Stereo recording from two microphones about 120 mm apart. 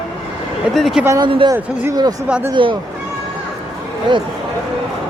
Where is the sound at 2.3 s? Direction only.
10° right (ahead or behind).